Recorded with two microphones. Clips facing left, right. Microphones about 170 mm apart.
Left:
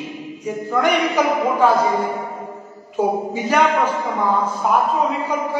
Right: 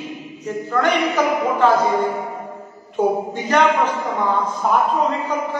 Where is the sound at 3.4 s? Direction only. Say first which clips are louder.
Even; 10° left (ahead or behind).